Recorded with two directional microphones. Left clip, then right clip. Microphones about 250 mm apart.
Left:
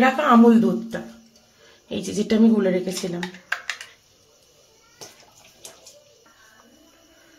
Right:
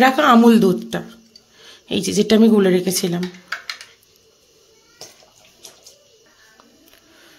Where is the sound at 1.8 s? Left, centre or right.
Right.